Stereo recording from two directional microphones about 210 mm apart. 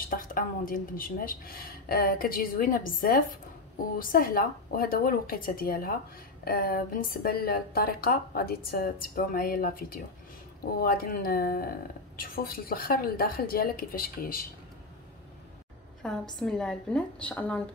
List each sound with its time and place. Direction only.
0.0 s speech: 40° left (ahead or behind)
16.0 s a woman's voice: 5° left (ahead or behind)